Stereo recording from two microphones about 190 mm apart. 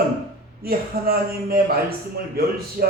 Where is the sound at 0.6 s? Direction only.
50° right (ahead or behind).